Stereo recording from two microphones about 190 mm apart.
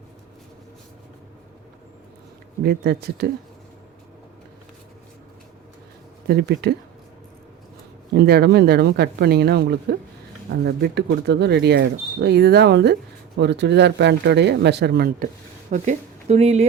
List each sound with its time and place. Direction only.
2.6 s speech: 55° right (ahead or behind)
6.2 s speech: 60° right (ahead or behind)
8.1 s speech: 55° right (ahead or behind)
15.7 s speech: 40° right (ahead or behind)